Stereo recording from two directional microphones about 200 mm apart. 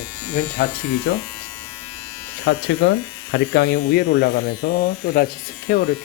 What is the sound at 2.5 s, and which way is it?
Speech, 65° left (ahead or behind).